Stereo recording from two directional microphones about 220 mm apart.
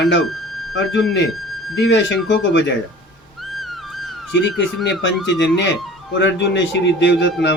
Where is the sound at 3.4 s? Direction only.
Centre (ahead or behind).